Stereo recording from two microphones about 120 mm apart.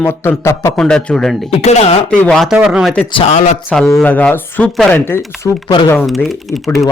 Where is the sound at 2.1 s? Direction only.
5° left (ahead or behind).